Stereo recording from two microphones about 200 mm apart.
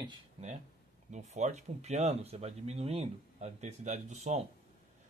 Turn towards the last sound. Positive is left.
turn(degrees=-35)  # may be behind; listen again after turning